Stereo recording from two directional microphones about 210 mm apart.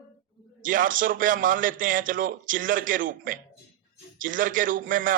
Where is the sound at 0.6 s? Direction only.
40° right (ahead or behind).